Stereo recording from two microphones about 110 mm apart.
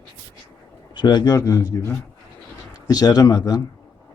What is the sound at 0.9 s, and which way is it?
Speech, 40° left (ahead or behind).